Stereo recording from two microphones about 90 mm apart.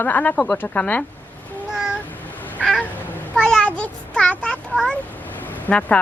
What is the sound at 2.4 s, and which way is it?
Cat, 20° left (ahead or behind).